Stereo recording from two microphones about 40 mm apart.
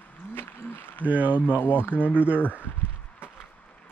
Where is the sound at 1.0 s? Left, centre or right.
Right.